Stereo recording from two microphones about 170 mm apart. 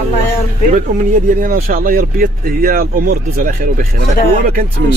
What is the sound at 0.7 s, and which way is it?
Speech, 50° right (ahead or behind).